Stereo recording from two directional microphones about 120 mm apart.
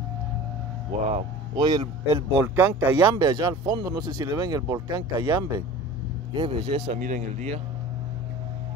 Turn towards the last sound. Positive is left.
turn(degrees=-85)